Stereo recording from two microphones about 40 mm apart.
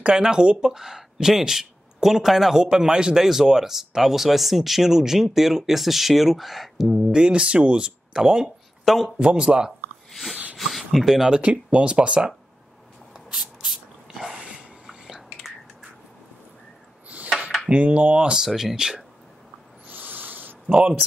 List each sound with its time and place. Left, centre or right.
0.0 s speech: centre
7.2 s speech: right
8.8 s a man's voice: centre
9.2 s speech: right
10.6 s speech: centre
11.2 s speech: right
13.7 s a sound: centre
17.7 s speech: right
18.4 s speech: centre
19.9 s owl: right